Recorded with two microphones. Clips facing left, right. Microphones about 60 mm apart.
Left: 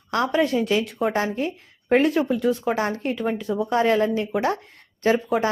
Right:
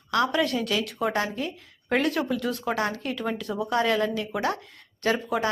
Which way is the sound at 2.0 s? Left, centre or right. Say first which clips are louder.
Left 5 dB; centre.